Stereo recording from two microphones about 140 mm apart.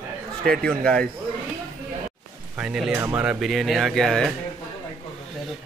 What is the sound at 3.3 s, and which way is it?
Speech, centre (ahead or behind).